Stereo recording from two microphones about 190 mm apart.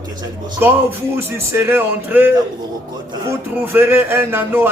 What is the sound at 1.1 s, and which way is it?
A man's voice, 10° right (ahead or behind).